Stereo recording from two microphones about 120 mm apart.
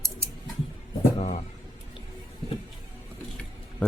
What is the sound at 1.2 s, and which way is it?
Speech, 65° left (ahead or behind).